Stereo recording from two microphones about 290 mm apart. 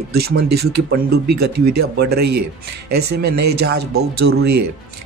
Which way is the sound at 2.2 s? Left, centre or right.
Right.